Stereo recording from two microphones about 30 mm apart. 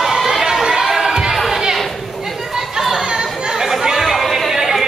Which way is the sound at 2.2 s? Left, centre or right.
Centre.